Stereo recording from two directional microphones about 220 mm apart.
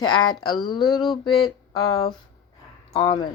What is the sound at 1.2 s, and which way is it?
Speech, 20° left (ahead or behind).